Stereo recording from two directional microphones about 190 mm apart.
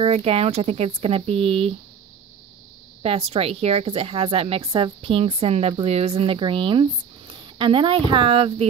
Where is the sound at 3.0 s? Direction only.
30° right (ahead or behind).